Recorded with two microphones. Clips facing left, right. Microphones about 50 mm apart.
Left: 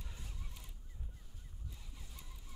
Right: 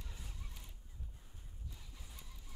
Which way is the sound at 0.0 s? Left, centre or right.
Centre.